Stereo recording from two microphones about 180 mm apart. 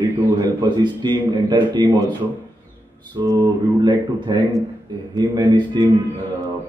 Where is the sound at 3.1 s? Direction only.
20° right (ahead or behind).